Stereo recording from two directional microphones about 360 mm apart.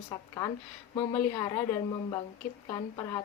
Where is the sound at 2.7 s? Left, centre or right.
Centre.